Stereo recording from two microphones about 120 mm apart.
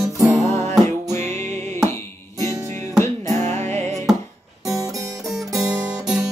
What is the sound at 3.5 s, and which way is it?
Music, 70° right (ahead or behind).